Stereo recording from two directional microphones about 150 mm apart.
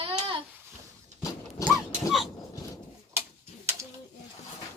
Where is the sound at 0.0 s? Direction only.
40° right (ahead or behind).